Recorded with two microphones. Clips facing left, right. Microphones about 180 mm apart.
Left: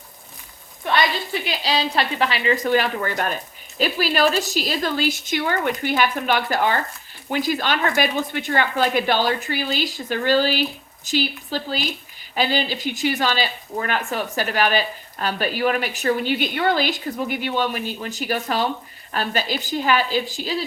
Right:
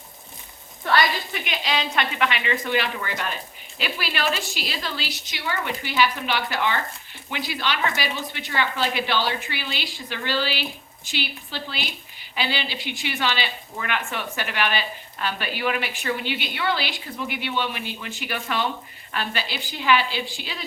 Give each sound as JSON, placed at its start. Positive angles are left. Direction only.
{"t": 0.8, "sound": "sizzle", "side_deg": 15}
{"t": 1.3, "sound": "speech", "side_deg": 35}